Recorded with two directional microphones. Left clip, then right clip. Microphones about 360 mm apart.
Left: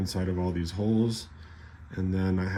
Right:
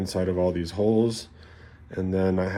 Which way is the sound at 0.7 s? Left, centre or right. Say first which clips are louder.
Right 6 dB; right.